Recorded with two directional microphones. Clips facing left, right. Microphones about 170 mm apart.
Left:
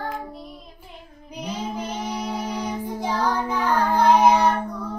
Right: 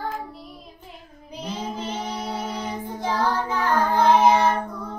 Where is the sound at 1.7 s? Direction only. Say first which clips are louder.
Left 1 dB; 10° left (ahead or behind).